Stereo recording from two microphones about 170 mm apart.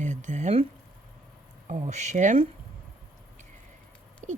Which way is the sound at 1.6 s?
45° right (ahead or behind).